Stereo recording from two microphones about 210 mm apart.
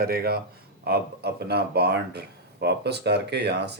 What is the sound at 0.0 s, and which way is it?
Speech, 45° right (ahead or behind).